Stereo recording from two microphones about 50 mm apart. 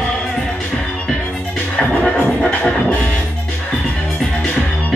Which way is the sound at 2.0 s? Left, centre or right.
Centre.